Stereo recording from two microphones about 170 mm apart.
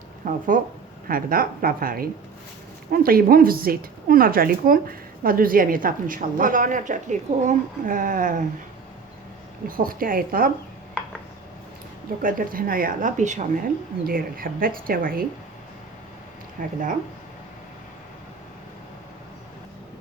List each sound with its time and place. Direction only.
0.3 s a woman's voice: 50° right (ahead or behind)
9.6 s a woman's voice: 55° right (ahead or behind)
12.2 s a woman's voice: 55° right (ahead or behind)
14.1 s a woman's voice: 55° right (ahead or behind)
16.6 s speech: 50° right (ahead or behind)